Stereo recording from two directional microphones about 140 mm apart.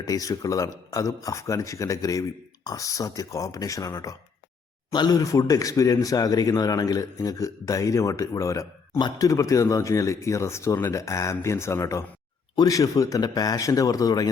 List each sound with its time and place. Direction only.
0.0 s speech: 25° left (ahead or behind)